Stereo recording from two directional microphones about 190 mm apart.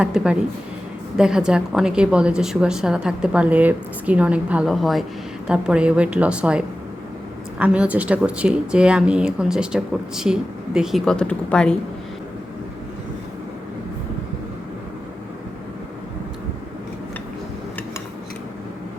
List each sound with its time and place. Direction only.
0.0 s a woman's voice: 5° right (ahead or behind)